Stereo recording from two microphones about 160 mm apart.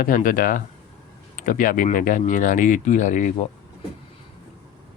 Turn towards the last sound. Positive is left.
turn(degrees=50)  # may be behind; listen again after turning